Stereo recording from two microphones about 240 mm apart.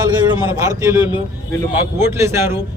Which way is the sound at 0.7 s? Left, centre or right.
Centre.